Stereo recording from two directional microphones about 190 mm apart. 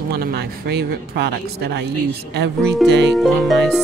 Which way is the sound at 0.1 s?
55° right (ahead or behind).